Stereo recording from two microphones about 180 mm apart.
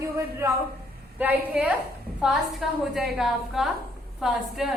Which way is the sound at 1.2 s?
10° right (ahead or behind).